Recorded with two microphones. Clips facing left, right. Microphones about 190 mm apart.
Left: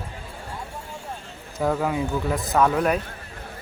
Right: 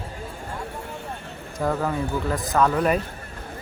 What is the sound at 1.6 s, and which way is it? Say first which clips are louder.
Speech: left 1 dB; 5° left (ahead or behind).